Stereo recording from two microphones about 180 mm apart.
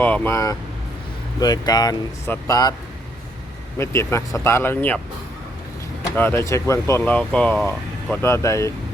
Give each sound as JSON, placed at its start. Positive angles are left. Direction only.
{"t": 0.0, "sound": "speech", "side_deg": 10}
{"t": 3.8, "sound": "speech", "side_deg": 15}
{"t": 6.1, "sound": "speech", "side_deg": 15}